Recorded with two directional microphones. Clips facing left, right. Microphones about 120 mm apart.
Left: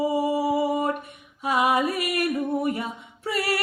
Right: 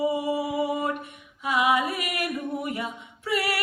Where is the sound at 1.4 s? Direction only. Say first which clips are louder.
Left 1 dB; 40° left (ahead or behind).